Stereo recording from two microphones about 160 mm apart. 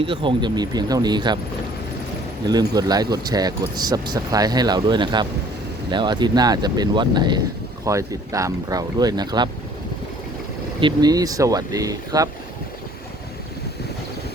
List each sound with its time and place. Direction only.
0.0 s speech: 30° right (ahead or behind)
2.5 s speech: 25° right (ahead or behind)
10.8 s speech: 25° right (ahead or behind)